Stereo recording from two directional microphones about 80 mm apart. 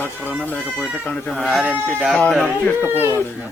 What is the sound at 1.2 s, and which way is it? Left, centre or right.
Speech, centre.